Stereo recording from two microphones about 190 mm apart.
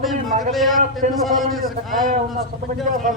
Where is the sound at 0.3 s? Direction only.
45° right (ahead or behind).